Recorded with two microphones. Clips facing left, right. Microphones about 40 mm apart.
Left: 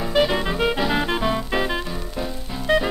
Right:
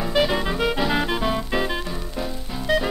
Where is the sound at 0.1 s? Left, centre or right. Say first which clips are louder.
Left 2 dB; centre.